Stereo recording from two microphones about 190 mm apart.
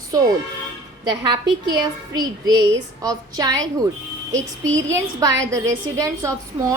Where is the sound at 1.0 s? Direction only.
25° right (ahead or behind).